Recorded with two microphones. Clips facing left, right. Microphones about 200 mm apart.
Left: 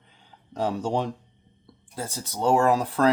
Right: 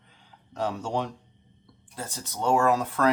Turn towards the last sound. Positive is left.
turn(degrees=30)  # may be behind; listen again after turning